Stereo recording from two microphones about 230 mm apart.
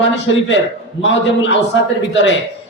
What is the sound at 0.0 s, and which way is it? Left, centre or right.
A man's voice, left.